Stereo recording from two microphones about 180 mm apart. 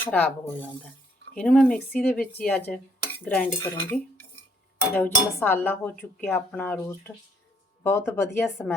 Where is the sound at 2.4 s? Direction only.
10° left (ahead or behind).